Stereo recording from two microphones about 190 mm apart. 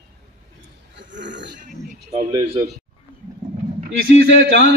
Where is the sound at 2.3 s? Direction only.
25° right (ahead or behind).